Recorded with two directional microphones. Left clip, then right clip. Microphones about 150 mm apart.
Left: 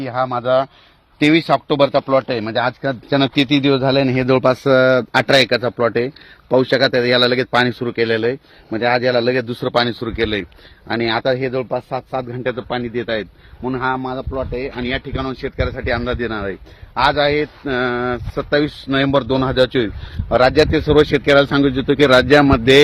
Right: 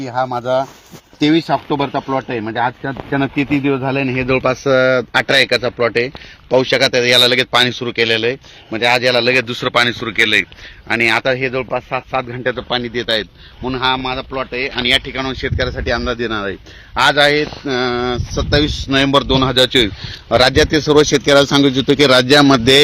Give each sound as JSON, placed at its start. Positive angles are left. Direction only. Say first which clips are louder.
{"t": 0.2, "sound": "speech", "louder": "even", "side_deg": -5}
{"t": 1.9, "sound": "speech", "louder": "left 3 dB", "side_deg": 45}
{"t": 2.6, "sound": "speech", "louder": "right 1 dB", "side_deg": 80}
{"t": 5.7, "sound": "speech", "louder": "right 2 dB", "side_deg": 65}
{"t": 12.3, "sound": "a man's voice", "louder": "right 3 dB", "side_deg": -5}
{"t": 14.0, "sound": "speech", "louder": "right 3 dB", "side_deg": -40}
{"t": 14.3, "sound": "speech", "louder": "right 3 dB", "side_deg": -20}
{"t": 14.8, "sound": "speech", "louder": "right 7 dB", "side_deg": -35}
{"t": 17.7, "sound": "speech", "louder": "right 1 dB", "side_deg": -70}